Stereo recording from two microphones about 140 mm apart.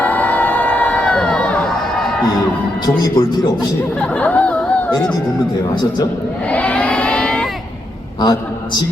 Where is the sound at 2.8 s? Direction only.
30° left (ahead or behind).